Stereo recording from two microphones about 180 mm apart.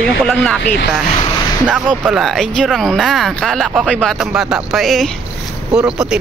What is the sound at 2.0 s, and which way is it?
Speech, centre (ahead or behind).